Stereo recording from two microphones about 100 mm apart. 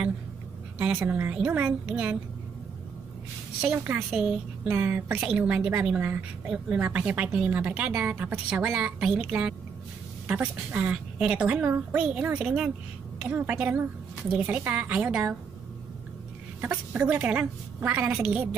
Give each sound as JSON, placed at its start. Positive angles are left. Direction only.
{"t": 0.9, "sound": "a woman's voice", "side_deg": -20}
{"t": 3.7, "sound": "a woman's voice", "side_deg": -20}
{"t": 16.6, "sound": "speech", "side_deg": -15}